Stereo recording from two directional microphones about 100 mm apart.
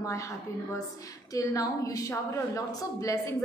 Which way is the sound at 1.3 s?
35° left (ahead or behind).